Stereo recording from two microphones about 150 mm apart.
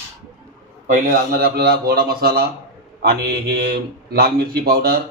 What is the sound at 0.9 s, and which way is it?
A man's voice, 65° right (ahead or behind).